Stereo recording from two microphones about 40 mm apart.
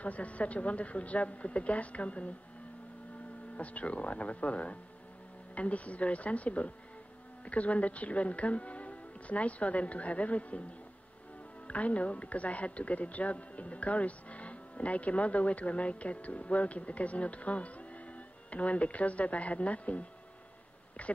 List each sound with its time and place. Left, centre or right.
0.0 s speech: left
3.5 s speech: left
11.6 s speech: left